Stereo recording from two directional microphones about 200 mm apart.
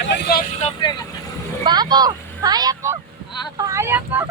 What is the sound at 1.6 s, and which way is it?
Speech, 20° right (ahead or behind).